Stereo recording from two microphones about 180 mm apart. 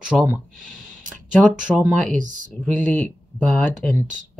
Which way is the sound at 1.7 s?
5° right (ahead or behind).